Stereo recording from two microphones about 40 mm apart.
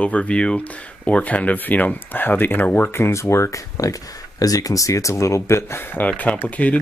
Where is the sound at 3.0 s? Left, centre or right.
Left.